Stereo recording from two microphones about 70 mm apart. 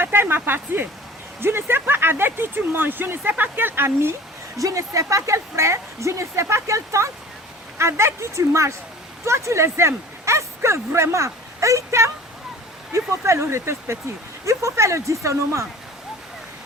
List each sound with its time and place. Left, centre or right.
0.0 s speech: right
4.5 s speech: right